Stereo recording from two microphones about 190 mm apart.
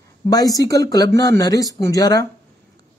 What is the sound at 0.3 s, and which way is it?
Speech, 20° left (ahead or behind).